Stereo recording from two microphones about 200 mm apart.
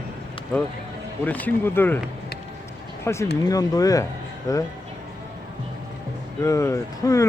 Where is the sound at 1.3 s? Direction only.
10° left (ahead or behind).